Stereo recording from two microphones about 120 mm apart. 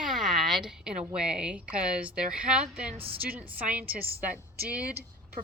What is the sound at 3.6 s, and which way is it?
Speech, 10° right (ahead or behind).